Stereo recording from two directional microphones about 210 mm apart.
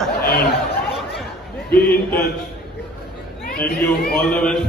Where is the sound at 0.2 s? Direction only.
45° left (ahead or behind).